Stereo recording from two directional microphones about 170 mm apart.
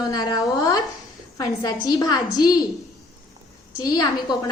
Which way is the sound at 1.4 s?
25° left (ahead or behind).